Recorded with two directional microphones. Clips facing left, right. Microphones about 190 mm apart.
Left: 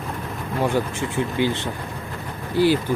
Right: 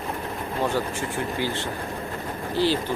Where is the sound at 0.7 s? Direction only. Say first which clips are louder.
Left 3 dB; 20° left (ahead or behind).